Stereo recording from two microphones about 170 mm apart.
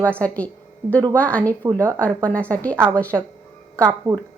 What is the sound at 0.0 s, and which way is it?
A woman's voice, 10° left (ahead or behind).